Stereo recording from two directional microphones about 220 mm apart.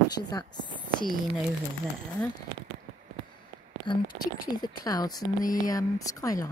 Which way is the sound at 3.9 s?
20° left (ahead or behind).